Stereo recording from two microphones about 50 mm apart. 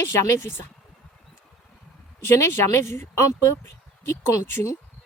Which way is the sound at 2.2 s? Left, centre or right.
Left.